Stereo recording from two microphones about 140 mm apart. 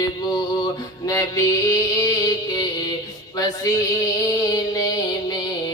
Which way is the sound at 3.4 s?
25° left (ahead or behind).